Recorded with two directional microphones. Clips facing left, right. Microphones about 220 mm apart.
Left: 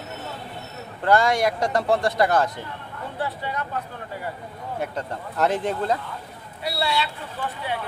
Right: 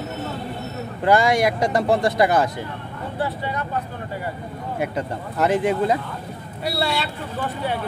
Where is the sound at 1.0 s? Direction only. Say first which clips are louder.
Right 2 dB; 10° right (ahead or behind).